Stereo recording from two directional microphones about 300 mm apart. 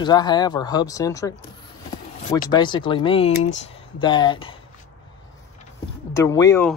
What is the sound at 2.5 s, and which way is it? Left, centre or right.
Speech, centre.